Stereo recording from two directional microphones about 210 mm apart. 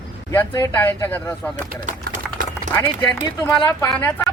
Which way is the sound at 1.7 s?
35° right (ahead or behind).